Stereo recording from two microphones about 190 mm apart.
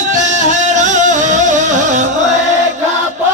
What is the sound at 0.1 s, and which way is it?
Music, 40° right (ahead or behind).